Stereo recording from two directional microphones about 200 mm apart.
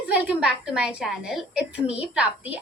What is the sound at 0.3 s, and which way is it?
A woman's voice, 5° right (ahead or behind).